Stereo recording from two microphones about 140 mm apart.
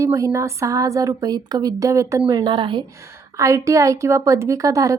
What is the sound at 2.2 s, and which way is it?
Speech, 35° right (ahead or behind).